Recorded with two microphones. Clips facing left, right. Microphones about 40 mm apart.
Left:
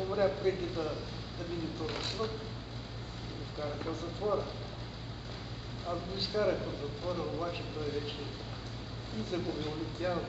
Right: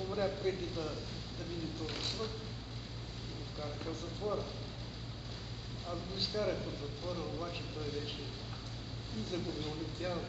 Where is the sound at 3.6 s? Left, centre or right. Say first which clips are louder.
Left 5 dB; centre.